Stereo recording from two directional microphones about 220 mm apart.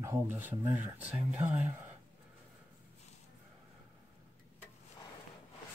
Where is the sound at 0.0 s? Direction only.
10° right (ahead or behind).